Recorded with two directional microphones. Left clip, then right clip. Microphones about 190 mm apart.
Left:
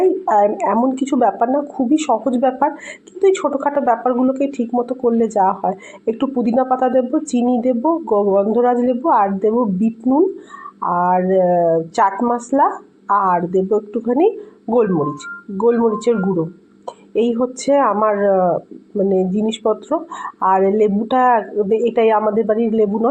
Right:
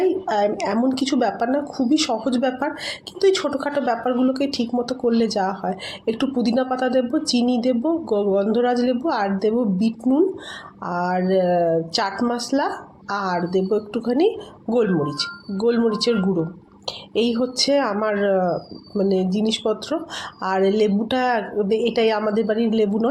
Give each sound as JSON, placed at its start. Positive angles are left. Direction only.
{"t": 0.3, "sound": "a woman's voice", "side_deg": 0}
{"t": 13.7, "sound": "speech", "side_deg": -15}
{"t": 14.7, "sound": "a woman's voice", "side_deg": -5}
{"t": 19.4, "sound": "speech", "side_deg": -15}